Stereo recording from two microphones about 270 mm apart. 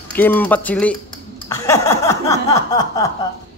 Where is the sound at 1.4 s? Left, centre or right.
Centre.